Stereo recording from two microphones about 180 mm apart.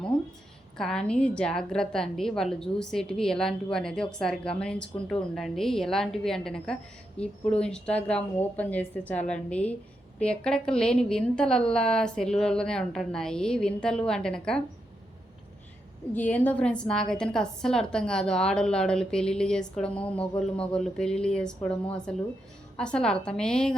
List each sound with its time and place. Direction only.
0.8 s a woman's voice: 5° left (ahead or behind)
16.1 s a woman's voice: 10° left (ahead or behind)